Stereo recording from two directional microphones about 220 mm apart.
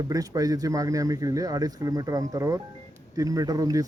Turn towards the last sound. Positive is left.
turn(degrees=-15)  # may be behind; listen again after turning